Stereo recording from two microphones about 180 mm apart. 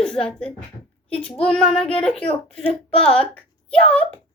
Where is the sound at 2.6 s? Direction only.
30° left (ahead or behind).